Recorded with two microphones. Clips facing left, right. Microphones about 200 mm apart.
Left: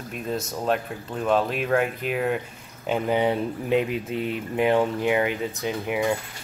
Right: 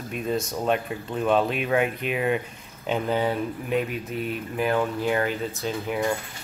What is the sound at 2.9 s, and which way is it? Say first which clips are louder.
Speech: left 2 dB; 15° left (ahead or behind).